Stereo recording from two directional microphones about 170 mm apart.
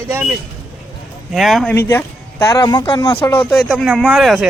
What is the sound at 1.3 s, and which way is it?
Speech, centre (ahead or behind).